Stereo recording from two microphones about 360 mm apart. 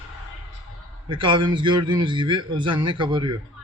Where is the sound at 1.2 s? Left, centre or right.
Centre.